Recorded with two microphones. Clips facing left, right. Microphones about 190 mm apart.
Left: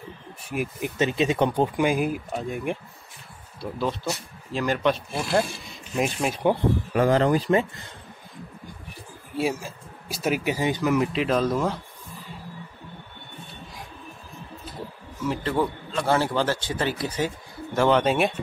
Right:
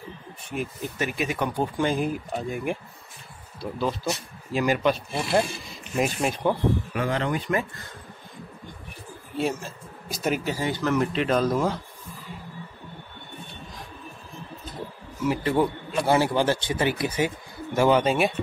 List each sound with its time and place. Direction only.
0.5 s speech: 10° left (ahead or behind)
6.9 s speech: 40° left (ahead or behind)
9.4 s speech: 5° left (ahead or behind)
10.5 s speech: 15° left (ahead or behind); by 11.8 s centre (ahead or behind)
15.2 s a man's voice: 10° right (ahead or behind)